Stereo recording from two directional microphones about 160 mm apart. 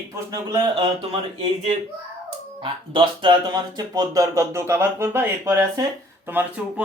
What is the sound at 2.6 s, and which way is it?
Speech, 30° right (ahead or behind).